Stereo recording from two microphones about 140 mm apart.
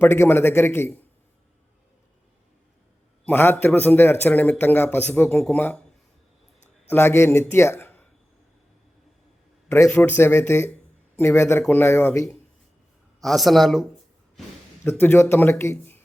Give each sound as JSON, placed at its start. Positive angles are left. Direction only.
{"t": 0.0, "sound": "a man's voice", "side_deg": 15}
{"t": 3.2, "sound": "a man's voice", "side_deg": 15}
{"t": 5.4, "sound": "speech", "side_deg": 5}
{"t": 6.9, "sound": "a man's voice", "side_deg": 20}
{"t": 9.6, "sound": "a man's voice", "side_deg": 20}
{"t": 13.2, "sound": "speech", "side_deg": 0}
{"t": 14.8, "sound": "a man's voice", "side_deg": 15}